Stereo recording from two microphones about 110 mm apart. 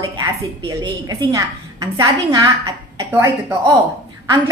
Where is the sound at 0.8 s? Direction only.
40° right (ahead or behind).